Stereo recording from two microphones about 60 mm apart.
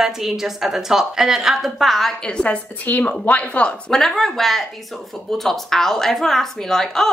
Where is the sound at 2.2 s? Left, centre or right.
Centre.